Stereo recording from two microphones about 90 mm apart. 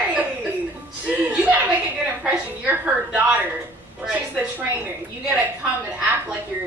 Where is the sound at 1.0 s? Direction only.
15° right (ahead or behind).